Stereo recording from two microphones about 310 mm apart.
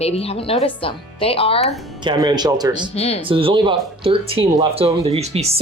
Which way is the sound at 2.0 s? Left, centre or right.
Centre.